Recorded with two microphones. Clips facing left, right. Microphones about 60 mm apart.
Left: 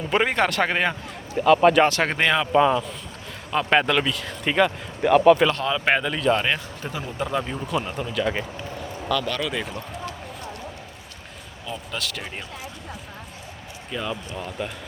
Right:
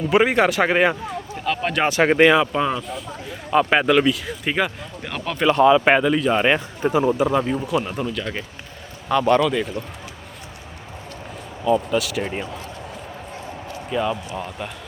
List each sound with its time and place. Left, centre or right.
0.1 s speech: centre
1.5 s speech: centre
1.8 s speech: centre
5.0 s speech: centre
5.5 s speech: centre
6.8 s a man's voice: right
7.2 s speech: centre
9.0 s a man's voice: right
9.4 s speech: centre
11.9 s speech: centre
13.9 s speech: centre